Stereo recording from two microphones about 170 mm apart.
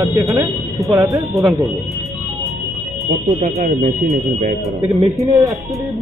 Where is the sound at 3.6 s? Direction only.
45° right (ahead or behind).